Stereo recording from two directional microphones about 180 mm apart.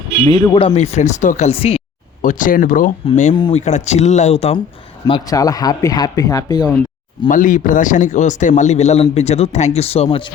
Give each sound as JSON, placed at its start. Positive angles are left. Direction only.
{"t": 0.3, "sound": "a man's voice", "side_deg": 25}
{"t": 2.2, "sound": "speech", "side_deg": 45}
{"t": 3.3, "sound": "speech", "side_deg": 25}
{"t": 3.6, "sound": "a man's voice", "side_deg": 40}
{"t": 5.0, "sound": "speech", "side_deg": 20}
{"t": 7.3, "sound": "a man's voice", "side_deg": 45}